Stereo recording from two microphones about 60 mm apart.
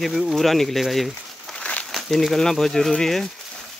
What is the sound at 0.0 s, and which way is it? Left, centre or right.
Speech, centre.